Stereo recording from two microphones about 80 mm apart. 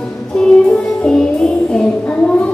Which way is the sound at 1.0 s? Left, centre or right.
Centre.